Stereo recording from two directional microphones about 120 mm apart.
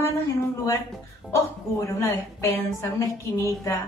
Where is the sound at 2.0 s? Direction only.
25° left (ahead or behind).